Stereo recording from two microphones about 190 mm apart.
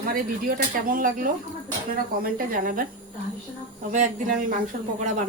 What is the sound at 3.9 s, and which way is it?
Speech, 40° right (ahead or behind).